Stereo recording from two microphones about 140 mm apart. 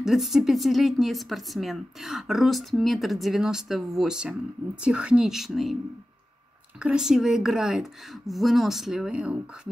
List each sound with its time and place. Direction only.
0.0 s speech: centre (ahead or behind)
6.8 s speech: 5° right (ahead or behind)